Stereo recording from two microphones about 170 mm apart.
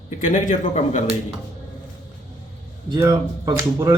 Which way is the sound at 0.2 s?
50° left (ahead or behind).